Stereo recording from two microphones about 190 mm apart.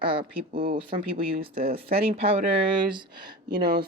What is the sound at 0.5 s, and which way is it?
Speech, 45° right (ahead or behind).